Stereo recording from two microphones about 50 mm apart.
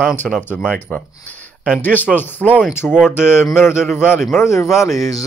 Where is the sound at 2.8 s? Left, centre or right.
Centre.